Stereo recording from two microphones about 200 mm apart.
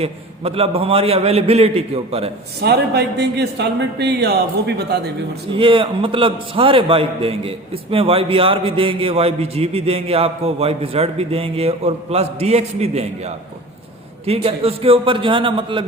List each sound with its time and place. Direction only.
0.0 s a man's voice: 30° right (ahead or behind)
2.6 s speech: 55° right (ahead or behind)
5.5 s a man's voice: 25° right (ahead or behind)